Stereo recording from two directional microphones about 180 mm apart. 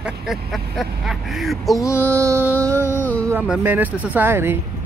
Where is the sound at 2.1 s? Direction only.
15° right (ahead or behind).